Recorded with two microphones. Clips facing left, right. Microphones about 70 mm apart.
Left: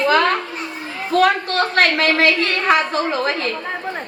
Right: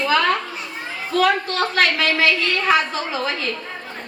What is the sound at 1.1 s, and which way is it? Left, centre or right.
A woman's voice, left.